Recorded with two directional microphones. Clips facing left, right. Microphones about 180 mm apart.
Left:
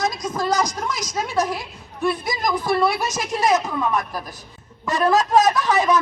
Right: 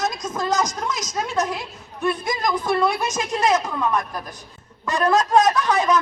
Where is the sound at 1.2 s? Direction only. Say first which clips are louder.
Left 2 dB; 5° left (ahead or behind).